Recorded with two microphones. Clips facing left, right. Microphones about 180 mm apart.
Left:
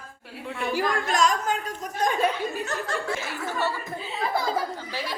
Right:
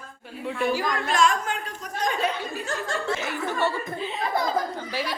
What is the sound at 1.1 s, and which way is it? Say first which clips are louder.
A woman's voice: right 2 dB; 40° left (ahead or behind).